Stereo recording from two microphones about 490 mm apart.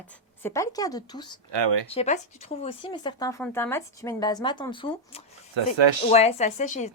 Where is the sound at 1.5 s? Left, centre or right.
Right.